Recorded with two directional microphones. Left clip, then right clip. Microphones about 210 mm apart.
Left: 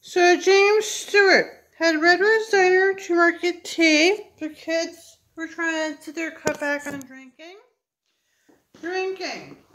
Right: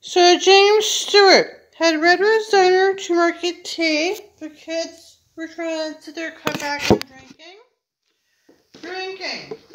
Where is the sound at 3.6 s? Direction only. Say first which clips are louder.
Left 3 dB; 20° left (ahead or behind).